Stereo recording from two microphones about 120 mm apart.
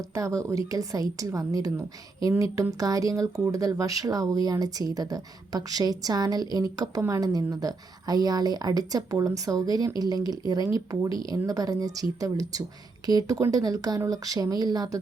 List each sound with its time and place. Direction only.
0.1 s a woman's voice: 25° right (ahead or behind)